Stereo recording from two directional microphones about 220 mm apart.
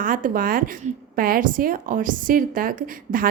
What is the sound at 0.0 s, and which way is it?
A woman's voice, 40° right (ahead or behind).